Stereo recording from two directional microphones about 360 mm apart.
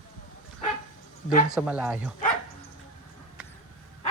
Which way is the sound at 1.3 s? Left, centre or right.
Left.